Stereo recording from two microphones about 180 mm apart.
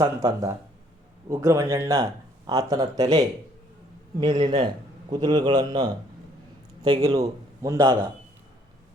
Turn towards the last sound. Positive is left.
turn(degrees=-20)  # may be behind; listen again after turning